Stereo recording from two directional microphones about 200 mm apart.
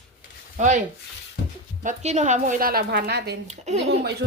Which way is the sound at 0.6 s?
40° right (ahead or behind).